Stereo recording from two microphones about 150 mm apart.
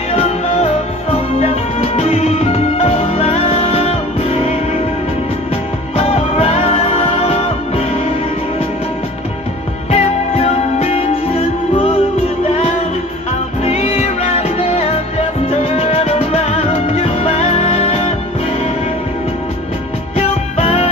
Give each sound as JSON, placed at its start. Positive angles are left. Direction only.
{"t": 0.1, "sound": "music", "side_deg": 45}
{"t": 5.9, "sound": "music", "side_deg": 40}
{"t": 9.8, "sound": "music", "side_deg": 45}
{"t": 13.6, "sound": "music", "side_deg": 45}
{"t": 20.2, "sound": "music", "side_deg": 45}